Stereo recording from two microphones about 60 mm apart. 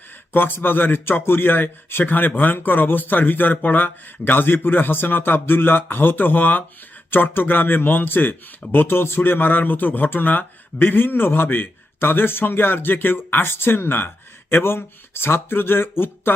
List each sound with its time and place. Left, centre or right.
0.3 s speech: left